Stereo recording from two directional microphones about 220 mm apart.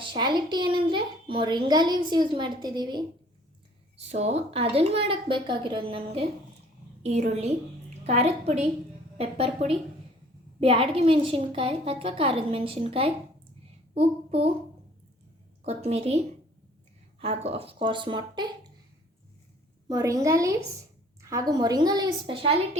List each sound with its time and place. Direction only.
0.0 s a child's voice: 20° right (ahead or behind)
3.9 s a child's voice: 30° right (ahead or behind)
13.9 s child singing: 25° right (ahead or behind)
15.6 s a child's voice: 30° right (ahead or behind)
19.9 s a woman's voice: 15° right (ahead or behind)